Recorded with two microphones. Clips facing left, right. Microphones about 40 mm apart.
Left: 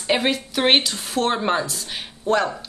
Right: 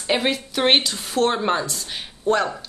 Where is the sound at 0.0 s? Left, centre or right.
Centre.